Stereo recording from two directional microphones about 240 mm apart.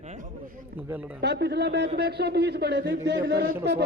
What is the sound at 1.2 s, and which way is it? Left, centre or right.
A man's voice, right.